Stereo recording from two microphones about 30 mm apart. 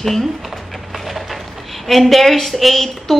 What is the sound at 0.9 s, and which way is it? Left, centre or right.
Wood, centre.